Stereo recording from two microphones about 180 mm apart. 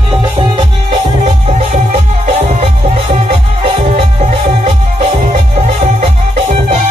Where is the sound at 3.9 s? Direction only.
40° right (ahead or behind).